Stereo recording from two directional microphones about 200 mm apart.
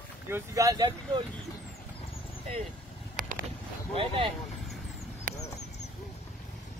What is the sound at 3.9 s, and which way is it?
Speech, 25° right (ahead or behind).